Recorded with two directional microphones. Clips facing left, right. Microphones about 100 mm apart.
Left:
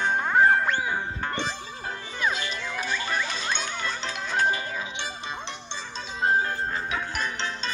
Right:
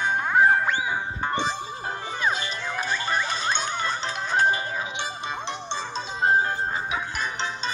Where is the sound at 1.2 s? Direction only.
20° right (ahead or behind).